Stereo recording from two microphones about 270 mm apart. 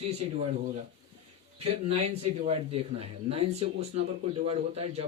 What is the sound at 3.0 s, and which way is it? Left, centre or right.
Speech, right.